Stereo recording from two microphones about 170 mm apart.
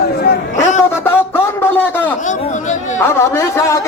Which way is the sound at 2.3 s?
45° left (ahead or behind).